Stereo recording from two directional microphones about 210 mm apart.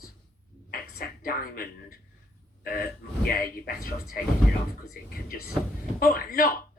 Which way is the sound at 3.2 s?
40° left (ahead or behind).